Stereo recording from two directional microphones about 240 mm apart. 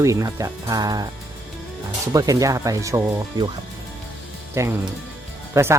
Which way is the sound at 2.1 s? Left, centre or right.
Centre.